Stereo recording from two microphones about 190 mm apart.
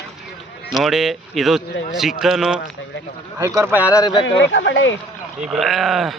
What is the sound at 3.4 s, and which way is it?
Speech, 15° right (ahead or behind).